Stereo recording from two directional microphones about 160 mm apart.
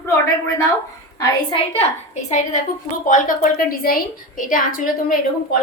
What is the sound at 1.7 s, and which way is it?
A woman's voice, 45° left (ahead or behind).